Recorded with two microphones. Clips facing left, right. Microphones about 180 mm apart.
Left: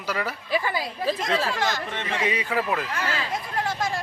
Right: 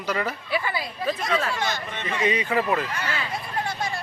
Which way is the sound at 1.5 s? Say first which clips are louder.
Left 2 dB; 90° left.